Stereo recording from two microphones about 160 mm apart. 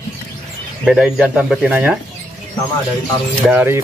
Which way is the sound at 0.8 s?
5° right (ahead or behind).